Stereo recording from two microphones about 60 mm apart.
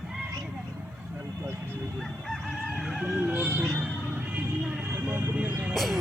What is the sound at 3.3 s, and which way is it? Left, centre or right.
Music, right.